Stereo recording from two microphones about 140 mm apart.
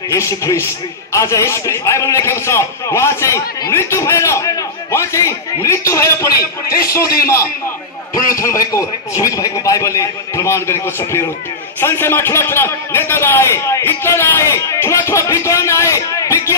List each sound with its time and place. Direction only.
0.1 s a man's voice: 20° left (ahead or behind)
6.4 s a man's voice: 90° left
8.4 s a man's voice: 25° left (ahead or behind)